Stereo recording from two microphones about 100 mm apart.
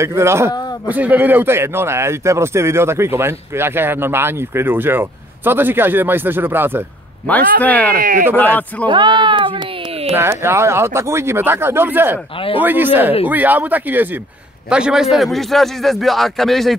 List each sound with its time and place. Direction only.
0.0 s speech: 25° right (ahead or behind)
7.2 s speech: 15° left (ahead or behind)
8.8 s a sound: 50° right (ahead or behind)
10.1 s speech: 25° right (ahead or behind)
14.7 s a man's voice: 10° right (ahead or behind)